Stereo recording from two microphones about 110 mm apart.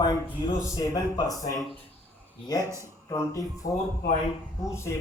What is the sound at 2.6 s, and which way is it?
Speech, 25° right (ahead or behind).